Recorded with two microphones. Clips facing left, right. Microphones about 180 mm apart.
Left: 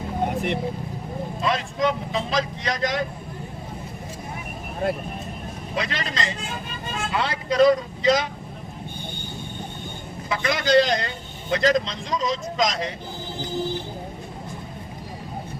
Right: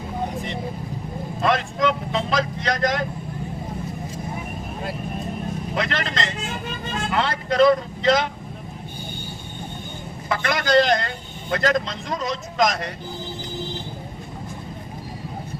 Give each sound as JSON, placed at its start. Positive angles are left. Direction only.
{"t": 1.4, "sound": "speech", "side_deg": -55}
{"t": 5.7, "sound": "a man's voice", "side_deg": -55}
{"t": 10.2, "sound": "a man's voice", "side_deg": -55}